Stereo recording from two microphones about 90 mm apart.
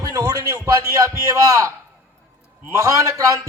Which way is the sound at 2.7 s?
35° right (ahead or behind).